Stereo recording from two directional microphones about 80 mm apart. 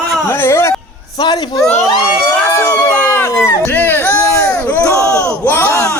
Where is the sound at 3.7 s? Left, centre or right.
Left.